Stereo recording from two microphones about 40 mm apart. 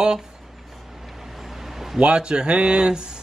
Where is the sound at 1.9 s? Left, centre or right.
Right.